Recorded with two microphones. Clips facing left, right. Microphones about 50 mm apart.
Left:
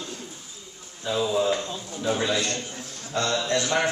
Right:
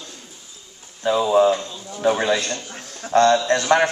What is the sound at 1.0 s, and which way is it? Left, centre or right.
A man's voice, right.